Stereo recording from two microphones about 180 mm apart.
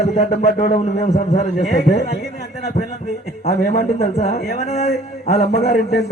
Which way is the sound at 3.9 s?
35° left (ahead or behind).